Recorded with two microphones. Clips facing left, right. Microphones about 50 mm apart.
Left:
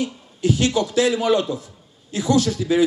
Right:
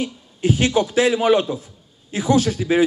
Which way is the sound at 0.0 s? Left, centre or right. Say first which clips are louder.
Even; right.